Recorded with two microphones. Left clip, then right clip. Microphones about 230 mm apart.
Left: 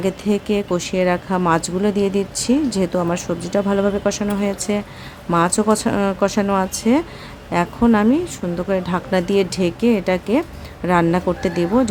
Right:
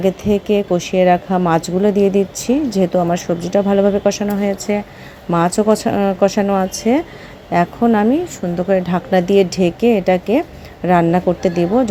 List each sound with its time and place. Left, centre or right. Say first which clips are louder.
0.0 s a woman's voice: right 4 dB; centre